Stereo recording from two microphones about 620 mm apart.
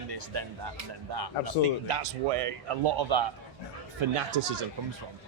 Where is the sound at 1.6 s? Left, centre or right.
Right.